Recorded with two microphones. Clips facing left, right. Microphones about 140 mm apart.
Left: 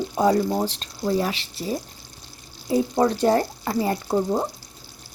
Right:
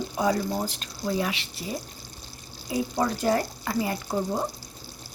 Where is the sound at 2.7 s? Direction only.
30° left (ahead or behind).